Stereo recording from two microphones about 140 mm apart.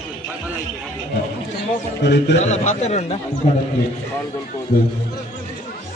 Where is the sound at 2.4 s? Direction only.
60° left (ahead or behind).